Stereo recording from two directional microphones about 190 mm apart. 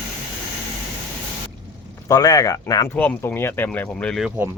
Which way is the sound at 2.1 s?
20° left (ahead or behind).